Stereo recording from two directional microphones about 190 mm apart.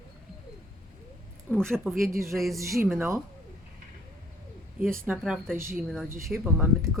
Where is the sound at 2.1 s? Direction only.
15° right (ahead or behind).